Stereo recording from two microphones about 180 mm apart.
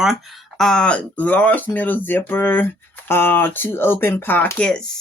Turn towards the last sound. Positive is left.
turn(degrees=5)  # may be behind; listen again after turning